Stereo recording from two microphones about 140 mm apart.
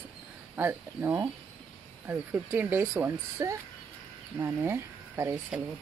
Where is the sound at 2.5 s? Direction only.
15° right (ahead or behind).